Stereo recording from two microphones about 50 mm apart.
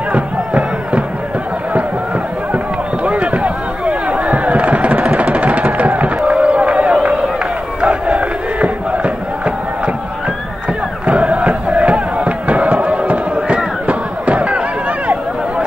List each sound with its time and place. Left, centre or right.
0.1 s music: right
2.5 s a sound: right
7.8 s crowd: right
11.1 s crowd: right
13.8 s chatter: right